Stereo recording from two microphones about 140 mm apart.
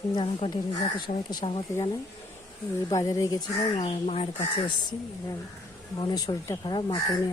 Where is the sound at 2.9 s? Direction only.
25° left (ahead or behind).